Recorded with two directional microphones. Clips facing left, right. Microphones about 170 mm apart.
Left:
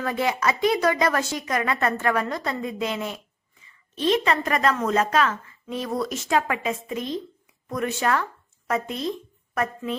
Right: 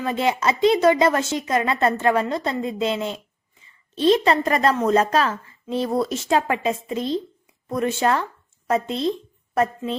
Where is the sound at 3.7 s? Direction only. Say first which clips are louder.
Right 5 dB; 30° right (ahead or behind).